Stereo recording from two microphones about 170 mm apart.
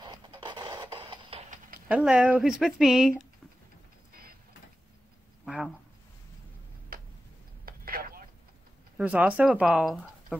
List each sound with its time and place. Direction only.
0.0 s printer: 25° right (ahead or behind)
1.9 s speech: 5° right (ahead or behind)
5.4 s a sound: centre (ahead or behind)
6.9 s tick-tock: 60° right (ahead or behind)
7.6 s a sound: 60° right (ahead or behind)
8.9 s speech: 5° right (ahead or behind)